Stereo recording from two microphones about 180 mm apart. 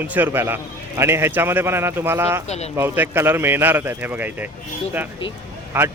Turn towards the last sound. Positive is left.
turn(degrees=-10)  # may be behind; listen again after turning